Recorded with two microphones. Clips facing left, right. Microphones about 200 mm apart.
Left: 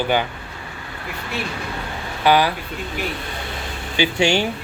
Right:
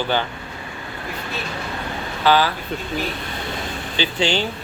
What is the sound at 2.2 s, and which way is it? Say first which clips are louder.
Speech: left 1 dB; 15° left (ahead or behind).